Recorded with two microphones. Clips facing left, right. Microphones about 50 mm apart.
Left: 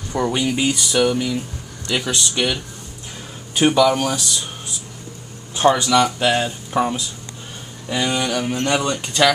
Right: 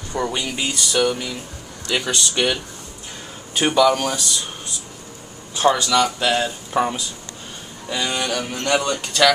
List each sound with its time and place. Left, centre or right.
0.1 s speech: centre
5.7 s speech: centre
6.7 s speech: centre
7.9 s speech: centre